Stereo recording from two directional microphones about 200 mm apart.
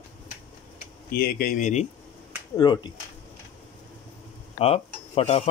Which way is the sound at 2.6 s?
20° left (ahead or behind).